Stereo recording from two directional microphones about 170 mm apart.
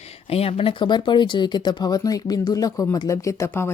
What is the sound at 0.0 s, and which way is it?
Speech, 35° left (ahead or behind).